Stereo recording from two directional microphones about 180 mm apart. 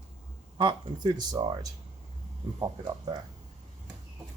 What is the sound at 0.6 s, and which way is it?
Speech, 25° right (ahead or behind).